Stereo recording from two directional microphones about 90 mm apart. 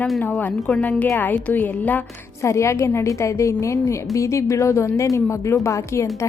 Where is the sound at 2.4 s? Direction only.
35° left (ahead or behind).